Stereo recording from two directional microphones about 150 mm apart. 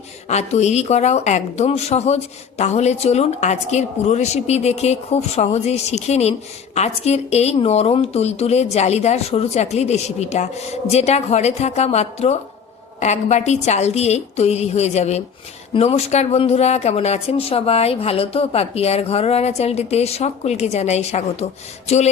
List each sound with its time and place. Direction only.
0.3 s speech: 50° left (ahead or behind)